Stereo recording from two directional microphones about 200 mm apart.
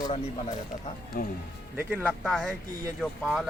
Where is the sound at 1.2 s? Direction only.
50° left (ahead or behind).